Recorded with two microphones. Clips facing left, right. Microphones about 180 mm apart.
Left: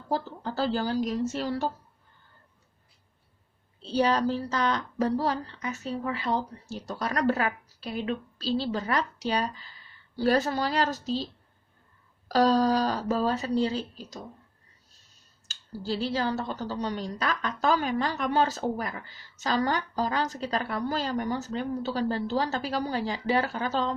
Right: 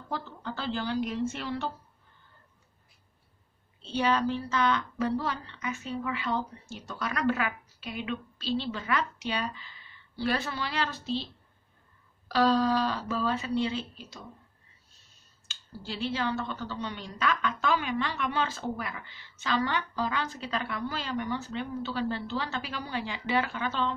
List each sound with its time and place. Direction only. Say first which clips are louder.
0.1 s a woman's voice: left 6 dB; 35° left (ahead or behind)
3.8 s a woman's voice: left 3 dB; 35° left (ahead or behind)
12.3 s a woman's voice: left 2 dB; 40° left (ahead or behind)
15.4 s a woman's voice: left 7 dB; 40° left (ahead or behind)